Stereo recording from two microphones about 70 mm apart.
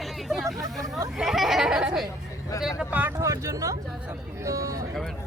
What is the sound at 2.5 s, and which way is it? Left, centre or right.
Speech, left.